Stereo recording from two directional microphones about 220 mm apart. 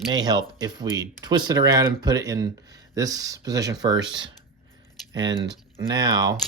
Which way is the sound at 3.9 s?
55° right (ahead or behind).